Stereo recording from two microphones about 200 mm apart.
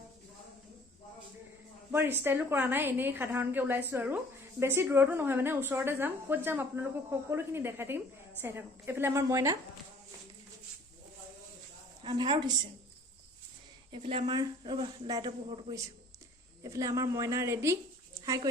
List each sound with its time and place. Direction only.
1.9 s a woman's voice: 10° right (ahead or behind)
12.0 s a man's voice: 25° right (ahead or behind)
13.9 s a man's voice: 25° right (ahead or behind)
16.6 s a woman's voice: 15° right (ahead or behind)